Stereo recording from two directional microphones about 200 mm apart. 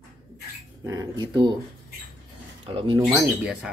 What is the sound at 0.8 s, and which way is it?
Speech, 15° right (ahead or behind).